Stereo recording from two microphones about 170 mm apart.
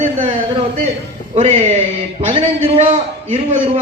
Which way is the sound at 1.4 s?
35° right (ahead or behind).